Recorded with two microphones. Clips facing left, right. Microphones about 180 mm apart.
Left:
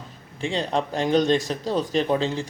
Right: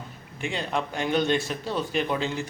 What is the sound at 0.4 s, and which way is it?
Speech, 30° left (ahead or behind).